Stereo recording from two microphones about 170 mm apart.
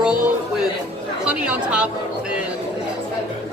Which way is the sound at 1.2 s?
5° right (ahead or behind).